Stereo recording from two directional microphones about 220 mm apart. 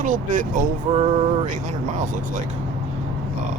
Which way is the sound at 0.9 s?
30° right (ahead or behind).